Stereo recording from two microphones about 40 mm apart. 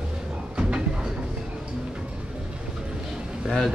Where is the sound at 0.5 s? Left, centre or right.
Right.